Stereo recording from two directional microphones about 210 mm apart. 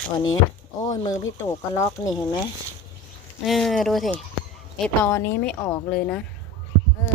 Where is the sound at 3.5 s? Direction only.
Centre (ahead or behind).